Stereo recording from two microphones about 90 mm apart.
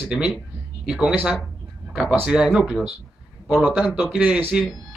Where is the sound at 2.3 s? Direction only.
10° right (ahead or behind).